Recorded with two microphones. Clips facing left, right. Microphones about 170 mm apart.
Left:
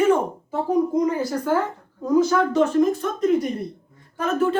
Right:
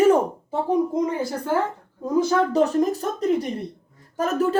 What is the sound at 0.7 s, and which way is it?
A woman's voice, 25° right (ahead or behind).